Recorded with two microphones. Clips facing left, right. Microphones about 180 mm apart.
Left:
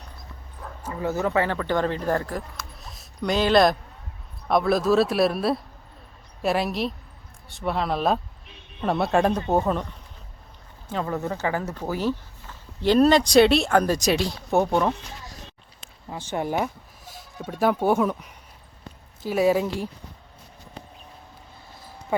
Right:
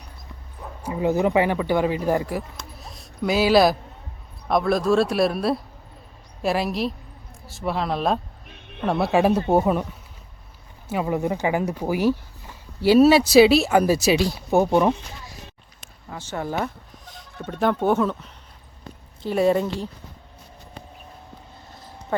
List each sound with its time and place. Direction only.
0.6 s speech: 15° right (ahead or behind)
8.4 s a sound: 65° right (ahead or behind)
8.9 s speech: centre (ahead or behind)
14.8 s a sound: 10° right (ahead or behind)
16.0 s speech: 15° left (ahead or behind)
16.6 s speech: 5° left (ahead or behind)